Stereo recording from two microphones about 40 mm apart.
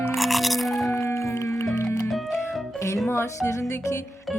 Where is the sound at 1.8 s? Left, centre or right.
Left.